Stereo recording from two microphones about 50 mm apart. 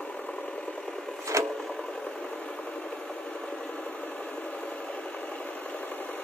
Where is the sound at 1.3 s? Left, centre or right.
Right.